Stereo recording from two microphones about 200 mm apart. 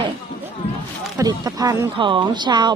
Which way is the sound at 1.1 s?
20° right (ahead or behind).